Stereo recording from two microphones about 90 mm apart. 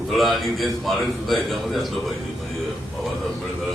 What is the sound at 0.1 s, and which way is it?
A man's voice, centre (ahead or behind).